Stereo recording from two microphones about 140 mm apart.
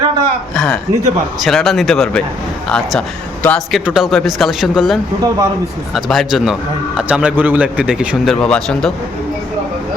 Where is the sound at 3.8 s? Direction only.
5° right (ahead or behind).